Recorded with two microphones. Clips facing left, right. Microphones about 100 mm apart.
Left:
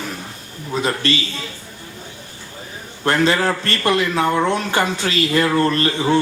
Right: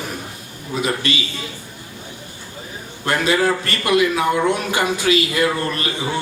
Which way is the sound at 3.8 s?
35° left (ahead or behind).